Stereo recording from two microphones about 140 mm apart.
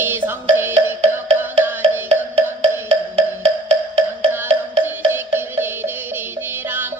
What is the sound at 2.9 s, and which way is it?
Wood block, 45° right (ahead or behind).